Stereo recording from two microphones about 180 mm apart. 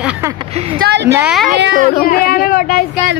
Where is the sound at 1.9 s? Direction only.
55° left (ahead or behind).